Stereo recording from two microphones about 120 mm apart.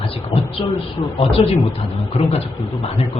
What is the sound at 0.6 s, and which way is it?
Speech, 50° left (ahead or behind).